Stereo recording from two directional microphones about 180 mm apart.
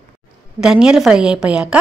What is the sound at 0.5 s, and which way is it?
A woman's voice, 5° right (ahead or behind).